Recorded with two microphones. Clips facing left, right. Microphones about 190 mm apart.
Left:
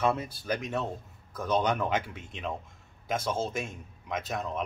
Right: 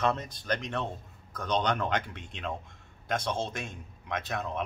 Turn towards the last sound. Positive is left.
turn(degrees=0)  # may be behind; listen again after turning